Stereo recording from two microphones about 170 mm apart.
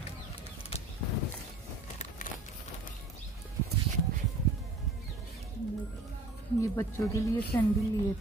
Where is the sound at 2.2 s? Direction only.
50° left (ahead or behind).